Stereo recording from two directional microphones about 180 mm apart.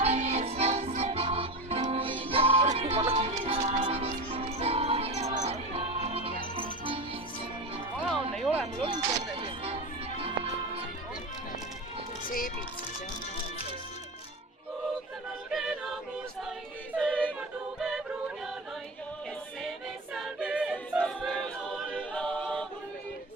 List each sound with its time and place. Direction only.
0.0 s music: 35° right (ahead or behind)
8.4 s music: 5° right (ahead or behind)
8.8 s music: 30° right (ahead or behind)
15.4 s a capella: centre (ahead or behind)
17.0 s yodeling: 5° left (ahead or behind)
17.7 s music: centre (ahead or behind)
20.1 s choir: 5° right (ahead or behind)
21.9 s a capella: 5° left (ahead or behind)